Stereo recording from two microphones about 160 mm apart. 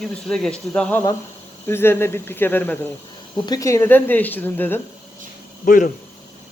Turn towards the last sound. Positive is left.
turn(degrees=55)  # may be behind; listen again after turning